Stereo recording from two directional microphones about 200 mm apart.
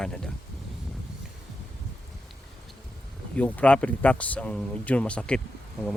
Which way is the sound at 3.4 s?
5° left (ahead or behind).